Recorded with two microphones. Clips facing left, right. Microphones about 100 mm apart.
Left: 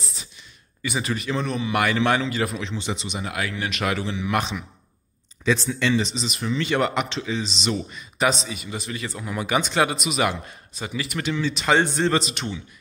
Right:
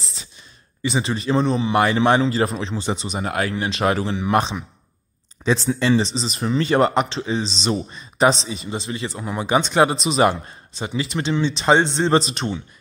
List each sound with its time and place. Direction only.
0.8 s speech: 25° right (ahead or behind)
5.7 s speech: 35° right (ahead or behind)